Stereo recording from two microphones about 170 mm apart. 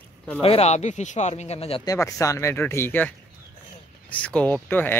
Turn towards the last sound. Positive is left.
turn(degrees=10)  # may be behind; listen again after turning